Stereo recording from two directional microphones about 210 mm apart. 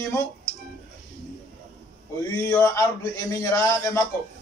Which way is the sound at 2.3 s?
10° left (ahead or behind).